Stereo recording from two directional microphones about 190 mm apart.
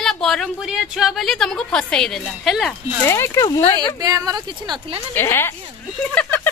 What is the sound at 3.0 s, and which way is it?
Speech, 15° left (ahead or behind).